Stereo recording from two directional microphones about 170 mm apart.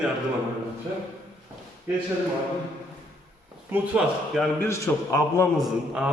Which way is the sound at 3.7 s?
5° right (ahead or behind).